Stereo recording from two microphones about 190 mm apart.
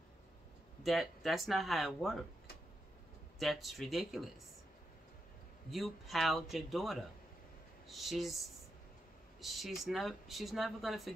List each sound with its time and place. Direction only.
0.8 s a man's voice: centre (ahead or behind)
3.3 s a man's voice: centre (ahead or behind)
5.7 s a man's voice: centre (ahead or behind)
9.4 s a man's voice: centre (ahead or behind)